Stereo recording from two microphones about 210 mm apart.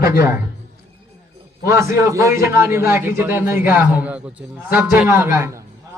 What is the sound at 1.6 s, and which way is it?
A man's voice, 15° right (ahead or behind).